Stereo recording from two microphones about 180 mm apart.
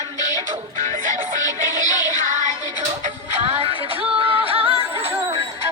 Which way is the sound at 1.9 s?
20° left (ahead or behind).